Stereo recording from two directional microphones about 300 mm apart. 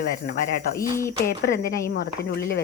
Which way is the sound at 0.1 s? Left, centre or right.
Left.